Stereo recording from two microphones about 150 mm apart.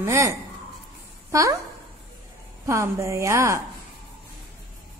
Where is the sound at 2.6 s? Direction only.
20° right (ahead or behind).